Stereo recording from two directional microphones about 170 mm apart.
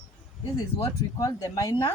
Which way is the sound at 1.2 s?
20° left (ahead or behind).